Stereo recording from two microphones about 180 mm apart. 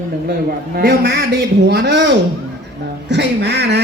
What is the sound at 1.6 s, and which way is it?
A man's voice, 70° right (ahead or behind).